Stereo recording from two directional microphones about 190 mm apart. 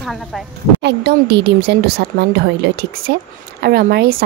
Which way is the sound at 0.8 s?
60° right (ahead or behind).